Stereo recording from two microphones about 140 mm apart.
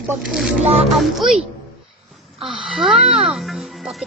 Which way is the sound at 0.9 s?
Centre (ahead or behind).